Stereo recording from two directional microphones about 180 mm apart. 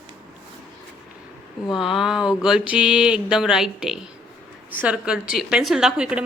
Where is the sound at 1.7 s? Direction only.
Centre (ahead or behind).